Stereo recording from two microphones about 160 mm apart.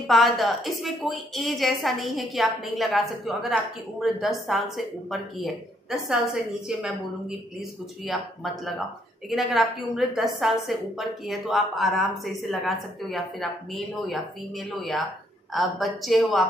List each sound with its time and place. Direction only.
0.0 s a woman's voice: centre (ahead or behind)
9.3 s a woman's voice: centre (ahead or behind)